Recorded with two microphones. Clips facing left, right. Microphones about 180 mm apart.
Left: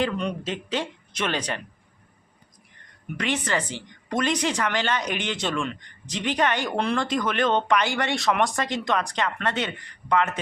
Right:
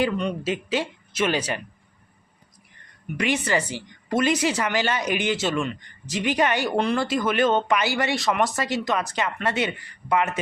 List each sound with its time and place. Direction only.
0.0 s speech: 5° right (ahead or behind)
3.2 s speech: 10° right (ahead or behind)